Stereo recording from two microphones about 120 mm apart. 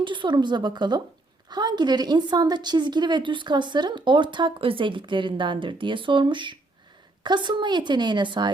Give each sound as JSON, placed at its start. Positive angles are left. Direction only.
{"t": 0.0, "sound": "a woman's voice", "side_deg": -40}